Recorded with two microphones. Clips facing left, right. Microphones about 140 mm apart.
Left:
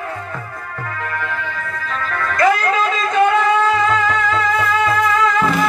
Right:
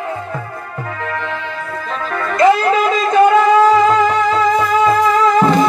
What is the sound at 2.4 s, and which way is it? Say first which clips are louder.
Music: right 4 dB; 30° right (ahead or behind).